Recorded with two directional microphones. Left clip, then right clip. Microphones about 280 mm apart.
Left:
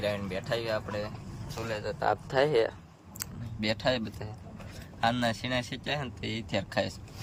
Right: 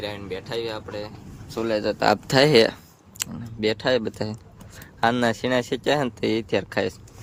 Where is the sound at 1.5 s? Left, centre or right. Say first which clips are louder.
Right 10 dB; right.